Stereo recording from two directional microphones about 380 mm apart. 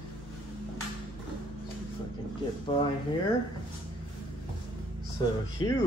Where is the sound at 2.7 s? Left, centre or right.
Centre.